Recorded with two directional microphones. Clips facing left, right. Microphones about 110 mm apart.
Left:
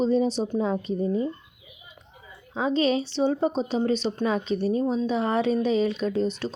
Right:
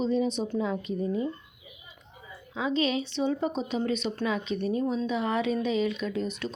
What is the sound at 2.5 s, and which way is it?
A woman's voice, 35° left (ahead or behind).